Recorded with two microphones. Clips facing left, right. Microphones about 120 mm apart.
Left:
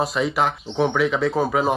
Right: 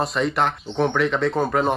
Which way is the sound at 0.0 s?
5° left (ahead or behind).